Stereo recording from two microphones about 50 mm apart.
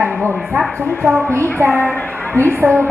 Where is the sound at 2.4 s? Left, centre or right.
Right.